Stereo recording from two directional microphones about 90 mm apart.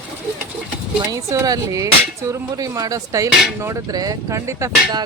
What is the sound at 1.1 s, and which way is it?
Speech, 35° right (ahead or behind).